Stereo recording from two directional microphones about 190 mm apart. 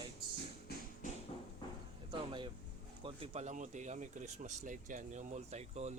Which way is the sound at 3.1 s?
30° right (ahead or behind).